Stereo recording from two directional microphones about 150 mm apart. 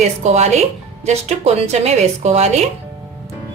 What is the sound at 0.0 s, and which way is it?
A woman's voice, 50° right (ahead or behind).